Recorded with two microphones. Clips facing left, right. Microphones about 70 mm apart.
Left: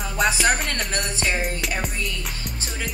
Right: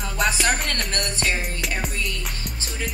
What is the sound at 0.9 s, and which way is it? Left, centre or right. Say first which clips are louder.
Music: even; centre.